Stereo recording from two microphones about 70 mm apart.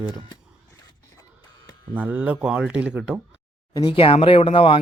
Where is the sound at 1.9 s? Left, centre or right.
Right.